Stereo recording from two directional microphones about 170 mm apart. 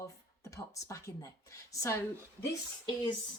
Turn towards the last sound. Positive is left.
turn(degrees=25)  # may be behind; listen again after turning